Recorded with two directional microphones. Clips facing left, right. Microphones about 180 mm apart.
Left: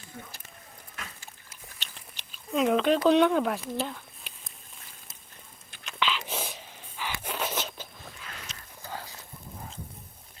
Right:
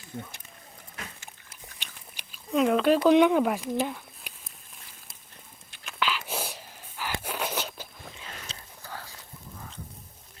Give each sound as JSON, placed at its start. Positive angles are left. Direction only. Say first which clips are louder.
{"t": 0.1, "sound": "speech", "louder": "right 6 dB", "side_deg": -25}
{"t": 1.8, "sound": "biting", "louder": "even", "side_deg": -10}
{"t": 2.5, "sound": "speech", "louder": "right 2 dB", "side_deg": 0}
{"t": 5.8, "sound": "whispering", "louder": "even", "side_deg": -5}
{"t": 7.2, "sound": "a sound", "louder": "left 1 dB", "side_deg": -10}
{"t": 8.8, "sound": "a sound", "louder": "left 3 dB", "side_deg": 15}